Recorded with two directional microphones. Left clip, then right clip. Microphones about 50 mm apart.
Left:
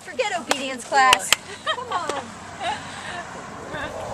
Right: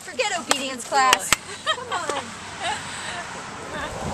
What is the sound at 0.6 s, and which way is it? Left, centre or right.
Speech, left.